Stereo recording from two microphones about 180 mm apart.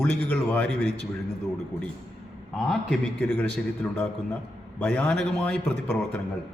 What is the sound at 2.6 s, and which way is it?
A man's voice, centre (ahead or behind).